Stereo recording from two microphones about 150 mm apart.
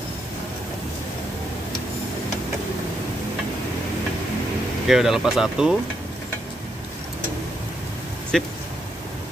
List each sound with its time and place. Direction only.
4.8 s speech: 5° right (ahead or behind)
8.3 s speech: 5° left (ahead or behind)